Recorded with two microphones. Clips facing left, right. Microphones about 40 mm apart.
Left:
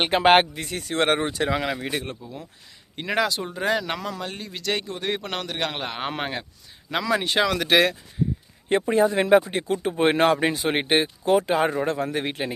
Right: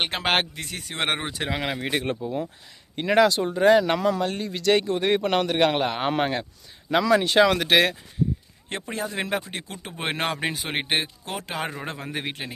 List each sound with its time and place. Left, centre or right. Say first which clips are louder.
0.0 s speech: left 7 dB; centre
2.0 s speech: right 8 dB; right
2.9 s speech: right 5 dB; centre
7.4 s speech: right 3 dB; centre
7.7 s speech: left 1 dB; centre
8.7 s speech: left 10 dB; centre